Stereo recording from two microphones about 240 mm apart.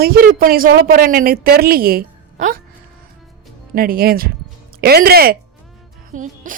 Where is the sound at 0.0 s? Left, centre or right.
Right.